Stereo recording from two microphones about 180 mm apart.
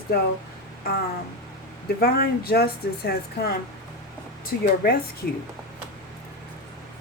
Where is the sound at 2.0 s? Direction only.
60° left (ahead or behind).